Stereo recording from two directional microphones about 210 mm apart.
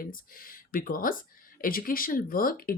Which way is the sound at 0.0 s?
40° left (ahead or behind).